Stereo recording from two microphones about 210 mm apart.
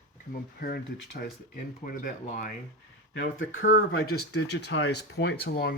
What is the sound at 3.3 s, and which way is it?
Speech, 65° left (ahead or behind).